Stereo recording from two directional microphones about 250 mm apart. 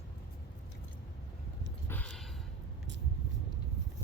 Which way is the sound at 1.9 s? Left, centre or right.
Centre.